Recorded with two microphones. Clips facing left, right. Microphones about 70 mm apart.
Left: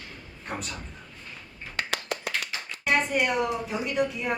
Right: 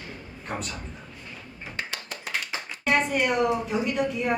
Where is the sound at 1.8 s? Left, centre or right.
Left.